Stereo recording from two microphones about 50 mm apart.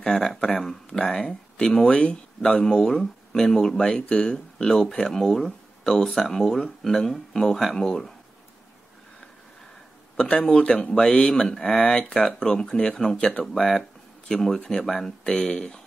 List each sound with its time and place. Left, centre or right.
0.0 s speech: centre
0.6 s a sound: centre
2.6 s speech: centre
10.4 s speech: centre
11.3 s speech: centre